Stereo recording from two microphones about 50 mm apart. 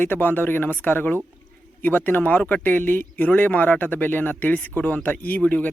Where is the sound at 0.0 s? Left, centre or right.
Left.